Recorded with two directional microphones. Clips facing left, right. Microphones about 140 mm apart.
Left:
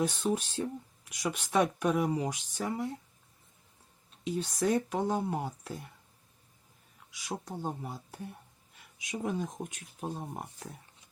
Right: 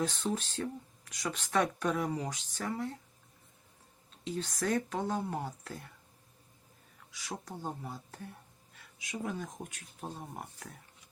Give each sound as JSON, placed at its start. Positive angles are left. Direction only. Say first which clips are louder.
{"t": 0.0, "sound": "speech", "louder": "left 3 dB", "side_deg": 15}
{"t": 4.2, "sound": "speech", "louder": "left 4 dB", "side_deg": 15}
{"t": 7.1, "sound": "speech", "louder": "left 4 dB", "side_deg": 15}